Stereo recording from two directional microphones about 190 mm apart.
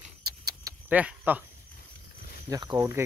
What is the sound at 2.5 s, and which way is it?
Speech, 20° right (ahead or behind).